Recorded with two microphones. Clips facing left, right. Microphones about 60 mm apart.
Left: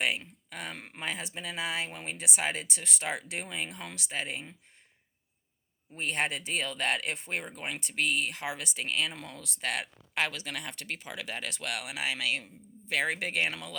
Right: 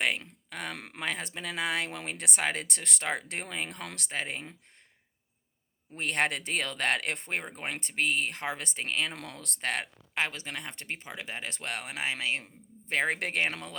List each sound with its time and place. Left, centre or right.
0.5 s speech: right
0.8 s speech: right
6.0 s speech: right
9.1 s speech: right
10.2 s speech: right